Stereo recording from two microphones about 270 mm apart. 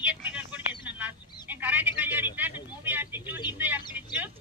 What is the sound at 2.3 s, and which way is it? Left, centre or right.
Vehicle, centre.